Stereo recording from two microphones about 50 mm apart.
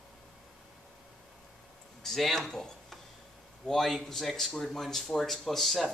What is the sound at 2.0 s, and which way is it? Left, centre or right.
Speech, centre.